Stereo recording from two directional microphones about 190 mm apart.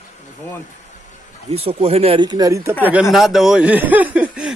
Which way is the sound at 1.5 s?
30° right (ahead or behind).